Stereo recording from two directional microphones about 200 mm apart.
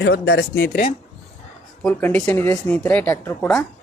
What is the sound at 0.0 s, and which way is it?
Speech, 55° left (ahead or behind).